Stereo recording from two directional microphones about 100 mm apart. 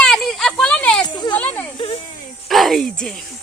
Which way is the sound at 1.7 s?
65° left (ahead or behind).